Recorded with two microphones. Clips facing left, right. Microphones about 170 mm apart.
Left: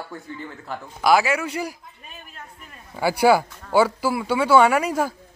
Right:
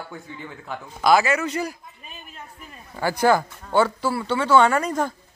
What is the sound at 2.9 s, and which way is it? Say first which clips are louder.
Speech: left 2 dB; 10° left (ahead or behind).